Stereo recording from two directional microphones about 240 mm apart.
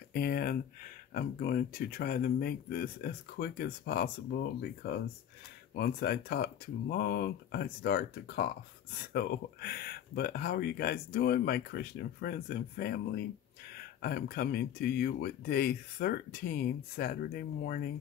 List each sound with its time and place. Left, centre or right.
0.1 s speech: left